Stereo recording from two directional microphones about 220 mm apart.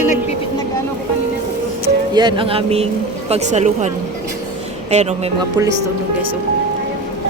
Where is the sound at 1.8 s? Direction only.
20° right (ahead or behind).